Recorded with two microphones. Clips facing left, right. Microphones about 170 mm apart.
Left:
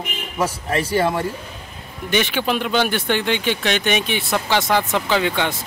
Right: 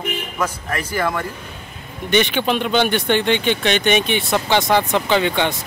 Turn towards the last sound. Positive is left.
turn(degrees=5)  # may be behind; listen again after turning